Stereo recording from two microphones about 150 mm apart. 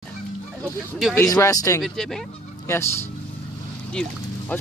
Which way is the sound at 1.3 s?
20° left (ahead or behind).